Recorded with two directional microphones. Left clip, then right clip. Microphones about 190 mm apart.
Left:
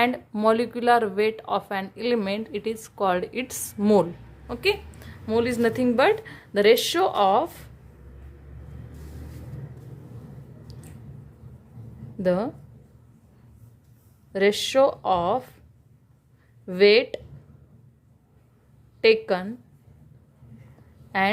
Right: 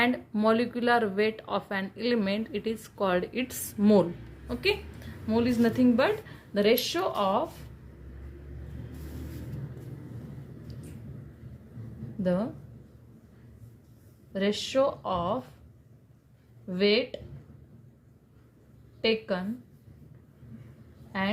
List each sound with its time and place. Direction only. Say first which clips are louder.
0.0 s a woman's voice: left 4 dB; 25° left (ahead or behind); by 7.6 s 55° left (ahead or behind)
12.2 s a woman's voice: left 6 dB; 55° left (ahead or behind)
14.3 s a woman's voice: left 7 dB; 55° left (ahead or behind)
16.6 s a woman's voice: left 8 dB; 55° left (ahead or behind)
19.0 s a woman's voice: left 8 dB; 55° left (ahead or behind)
21.1 s a woman's voice: left 8 dB; 50° left (ahead or behind)